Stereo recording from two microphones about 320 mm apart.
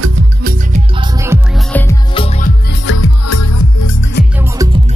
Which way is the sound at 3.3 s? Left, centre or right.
Left.